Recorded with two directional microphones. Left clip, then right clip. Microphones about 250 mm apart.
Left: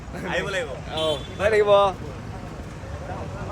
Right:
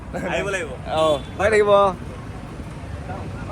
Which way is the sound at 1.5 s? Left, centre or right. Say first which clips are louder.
Right 2 dB; right.